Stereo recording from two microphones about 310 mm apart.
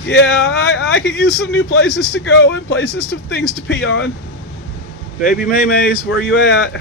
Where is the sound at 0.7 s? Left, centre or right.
Left.